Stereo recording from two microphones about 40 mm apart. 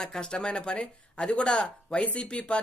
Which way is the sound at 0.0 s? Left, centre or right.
Centre.